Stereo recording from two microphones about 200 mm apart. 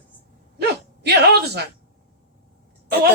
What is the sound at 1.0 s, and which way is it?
Speech, 55° right (ahead or behind).